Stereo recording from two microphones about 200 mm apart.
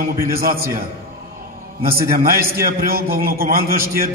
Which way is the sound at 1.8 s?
50° right (ahead or behind).